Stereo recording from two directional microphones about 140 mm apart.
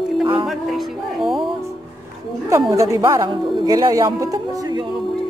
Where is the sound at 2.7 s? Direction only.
20° right (ahead or behind).